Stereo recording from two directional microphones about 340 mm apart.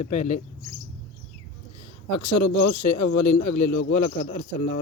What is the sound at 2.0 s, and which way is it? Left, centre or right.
Speech, left.